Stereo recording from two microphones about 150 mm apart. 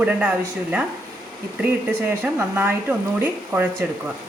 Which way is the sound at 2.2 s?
15° right (ahead or behind).